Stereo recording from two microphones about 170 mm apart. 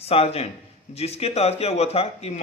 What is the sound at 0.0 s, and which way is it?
A man's voice, 35° left (ahead or behind).